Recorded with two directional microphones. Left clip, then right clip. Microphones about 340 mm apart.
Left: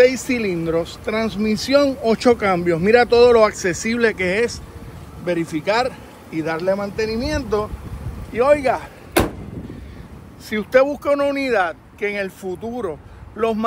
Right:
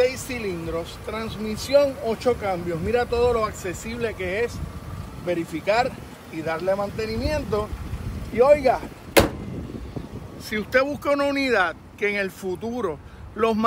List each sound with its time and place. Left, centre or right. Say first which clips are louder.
0.0 s speech: left 8 dB; left
10.5 s speech: left 6 dB; centre